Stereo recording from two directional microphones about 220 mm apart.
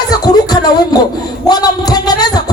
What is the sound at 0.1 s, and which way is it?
Music, 15° left (ahead or behind).